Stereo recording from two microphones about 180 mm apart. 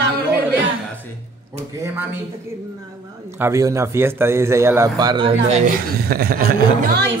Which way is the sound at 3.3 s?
15° right (ahead or behind).